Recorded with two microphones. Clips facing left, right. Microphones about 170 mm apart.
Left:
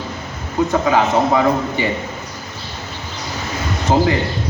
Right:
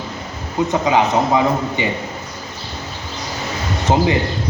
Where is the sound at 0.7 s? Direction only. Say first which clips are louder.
Even; 20° right (ahead or behind).